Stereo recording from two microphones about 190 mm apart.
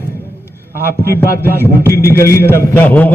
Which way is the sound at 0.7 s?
50° right (ahead or behind).